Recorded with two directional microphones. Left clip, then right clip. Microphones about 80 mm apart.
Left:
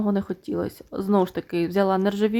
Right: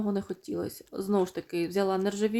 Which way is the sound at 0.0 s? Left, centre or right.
Left.